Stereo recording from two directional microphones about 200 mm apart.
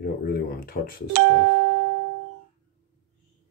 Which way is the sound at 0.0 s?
50° left (ahead or behind).